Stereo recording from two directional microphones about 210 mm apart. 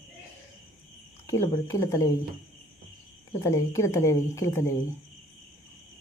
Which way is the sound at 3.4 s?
15° left (ahead or behind).